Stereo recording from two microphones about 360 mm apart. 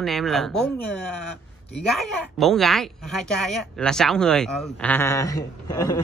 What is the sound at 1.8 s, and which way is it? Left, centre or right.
Speech, centre.